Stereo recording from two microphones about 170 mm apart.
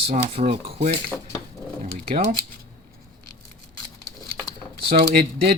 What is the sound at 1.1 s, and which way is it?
Speech, 10° left (ahead or behind).